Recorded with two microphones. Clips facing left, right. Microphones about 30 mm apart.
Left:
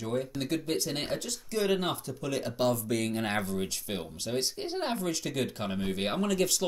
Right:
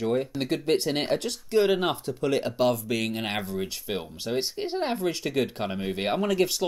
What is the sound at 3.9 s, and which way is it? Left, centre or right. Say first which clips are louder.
Speech: right 4 dB; centre.